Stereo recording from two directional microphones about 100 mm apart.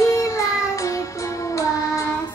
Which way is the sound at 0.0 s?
30° left (ahead or behind).